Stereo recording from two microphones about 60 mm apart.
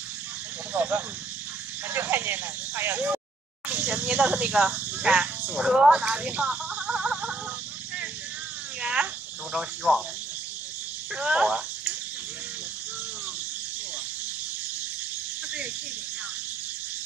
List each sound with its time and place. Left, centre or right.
0.7 s speech: right
1.9 s a sound: right
3.6 s speech: right
5.7 s a sound: centre
8.8 s cricket: centre
11.1 s speech: centre